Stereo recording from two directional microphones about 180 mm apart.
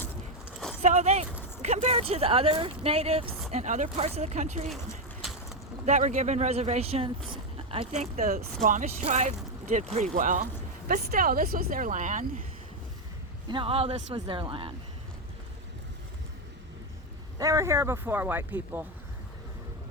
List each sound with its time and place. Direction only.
0.8 s speech: 35° right (ahead or behind)
5.8 s speech: 40° right (ahead or behind)
7.3 s a sound: 30° right (ahead or behind)
8.2 s speech: 55° right (ahead or behind)
8.6 s speech: 45° right (ahead or behind)
13.5 s speech: 30° right (ahead or behind)
17.3 s speech: 20° right (ahead or behind)